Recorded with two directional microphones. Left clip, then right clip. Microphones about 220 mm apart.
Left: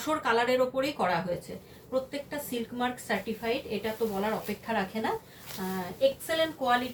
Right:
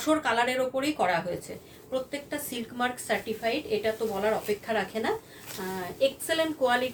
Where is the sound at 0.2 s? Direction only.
30° right (ahead or behind).